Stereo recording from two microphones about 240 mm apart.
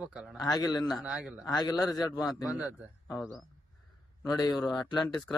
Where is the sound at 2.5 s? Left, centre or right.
Centre.